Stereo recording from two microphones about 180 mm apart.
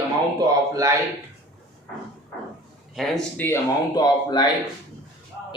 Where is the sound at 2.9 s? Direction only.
Centre (ahead or behind).